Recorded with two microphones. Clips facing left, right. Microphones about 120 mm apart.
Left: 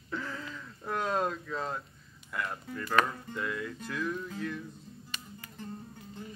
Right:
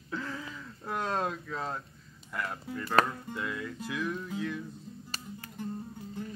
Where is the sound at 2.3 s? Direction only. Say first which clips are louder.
Even; 25° right (ahead or behind).